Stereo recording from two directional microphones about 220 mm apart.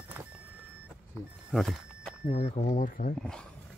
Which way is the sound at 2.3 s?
30° left (ahead or behind).